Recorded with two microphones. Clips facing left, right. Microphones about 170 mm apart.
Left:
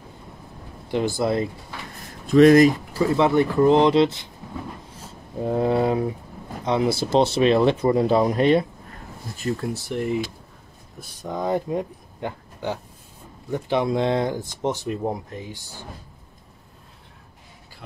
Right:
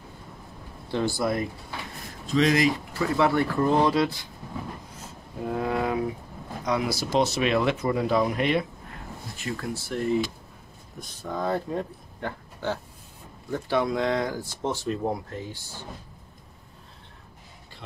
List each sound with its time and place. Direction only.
0.8 s speech: 15° left (ahead or behind)
2.2 s speech: 55° left (ahead or behind)
3.0 s speech: 20° left (ahead or behind)
5.4 s a sound: 30° left (ahead or behind)
6.6 s speech: 25° left (ahead or behind)
9.6 s speech: 15° left (ahead or behind)